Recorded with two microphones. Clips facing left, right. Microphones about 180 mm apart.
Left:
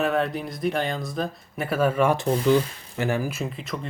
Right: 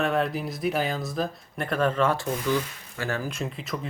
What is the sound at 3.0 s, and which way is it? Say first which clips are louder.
Speech: left 4 dB; 15° left (ahead or behind).